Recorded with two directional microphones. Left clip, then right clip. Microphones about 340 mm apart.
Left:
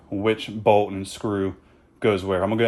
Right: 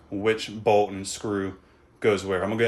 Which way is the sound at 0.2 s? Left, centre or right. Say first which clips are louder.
Left 1 dB; centre.